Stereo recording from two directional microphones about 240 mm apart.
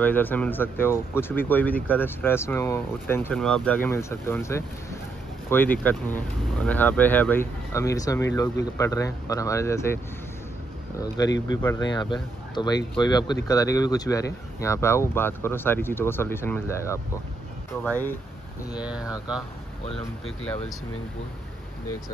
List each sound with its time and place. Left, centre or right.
0.0 s speech: centre
11.9 s speech: centre
18.8 s speech: centre